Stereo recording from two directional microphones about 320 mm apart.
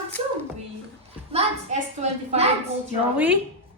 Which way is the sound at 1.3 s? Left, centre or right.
Centre.